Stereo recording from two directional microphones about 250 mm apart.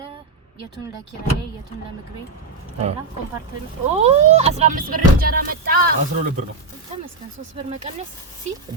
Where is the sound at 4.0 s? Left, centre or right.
Right.